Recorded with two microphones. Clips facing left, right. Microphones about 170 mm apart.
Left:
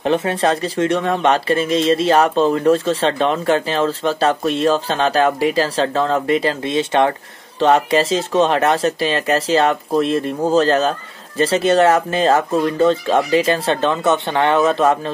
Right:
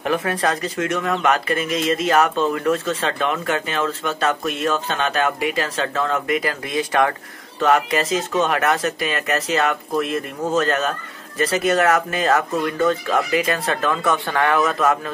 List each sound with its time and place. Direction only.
0.0 s speech: 25° left (ahead or behind)